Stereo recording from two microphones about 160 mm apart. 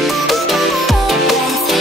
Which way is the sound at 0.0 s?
Centre (ahead or behind).